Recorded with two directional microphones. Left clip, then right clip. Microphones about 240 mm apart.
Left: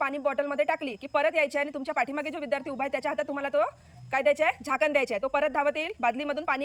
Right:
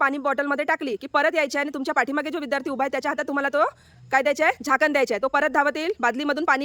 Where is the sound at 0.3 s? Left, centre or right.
Centre.